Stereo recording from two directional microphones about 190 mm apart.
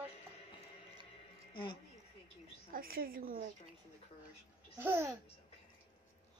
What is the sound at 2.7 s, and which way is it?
Speech, 50° right (ahead or behind).